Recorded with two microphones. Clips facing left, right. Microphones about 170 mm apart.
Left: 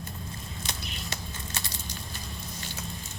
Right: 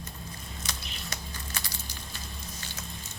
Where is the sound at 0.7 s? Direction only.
25° left (ahead or behind).